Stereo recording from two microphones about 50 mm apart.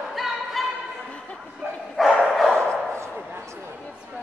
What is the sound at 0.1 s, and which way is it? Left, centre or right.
Choir, centre.